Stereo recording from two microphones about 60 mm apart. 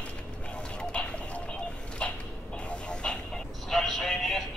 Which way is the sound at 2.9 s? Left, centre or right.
Centre.